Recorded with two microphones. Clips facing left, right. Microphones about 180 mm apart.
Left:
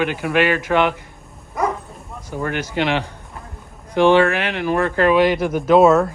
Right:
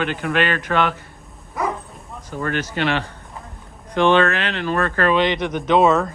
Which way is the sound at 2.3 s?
15° left (ahead or behind).